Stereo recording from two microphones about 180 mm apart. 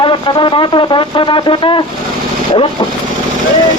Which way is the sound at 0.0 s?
25° left (ahead or behind).